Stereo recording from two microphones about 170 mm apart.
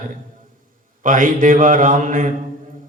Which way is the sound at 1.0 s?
50° right (ahead or behind).